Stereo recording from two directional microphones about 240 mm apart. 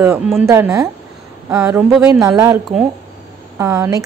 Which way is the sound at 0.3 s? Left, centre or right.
Centre.